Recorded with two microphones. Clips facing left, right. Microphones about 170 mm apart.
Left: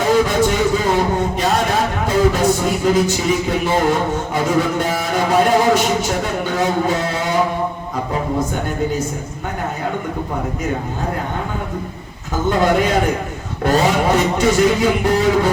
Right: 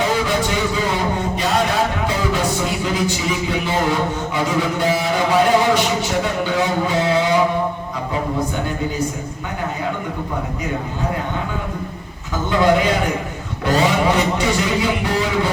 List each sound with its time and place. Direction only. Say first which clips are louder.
0.3 s a sound: left 4 dB; 45° left (ahead or behind)
2.0 s music: left 5 dB; 45° left (ahead or behind)
4.4 s speech: left 1 dB; 50° left (ahead or behind)
12.5 s speech: even; 45° left (ahead or behind)